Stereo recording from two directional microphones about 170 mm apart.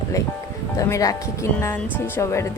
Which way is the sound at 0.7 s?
20° left (ahead or behind).